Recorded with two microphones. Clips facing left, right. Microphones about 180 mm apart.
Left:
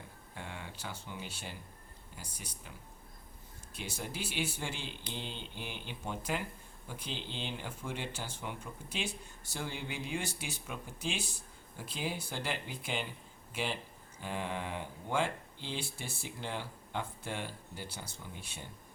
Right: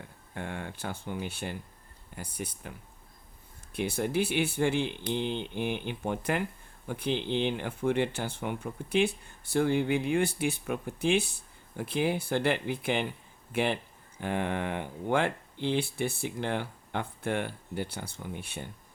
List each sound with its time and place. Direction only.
0.3 s speech: 55° right (ahead or behind)
3.8 s speech: 60° right (ahead or behind)